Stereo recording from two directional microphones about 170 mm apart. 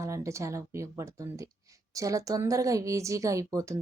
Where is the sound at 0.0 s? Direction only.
20° right (ahead or behind).